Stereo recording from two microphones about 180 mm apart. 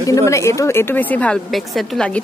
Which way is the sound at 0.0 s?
15° left (ahead or behind).